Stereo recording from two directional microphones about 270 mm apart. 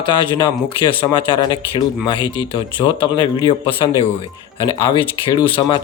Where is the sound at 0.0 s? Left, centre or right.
Centre.